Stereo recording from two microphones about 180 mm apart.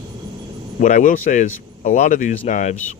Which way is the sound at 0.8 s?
50° left (ahead or behind).